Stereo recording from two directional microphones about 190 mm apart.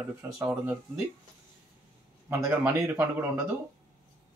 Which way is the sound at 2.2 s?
15° right (ahead or behind).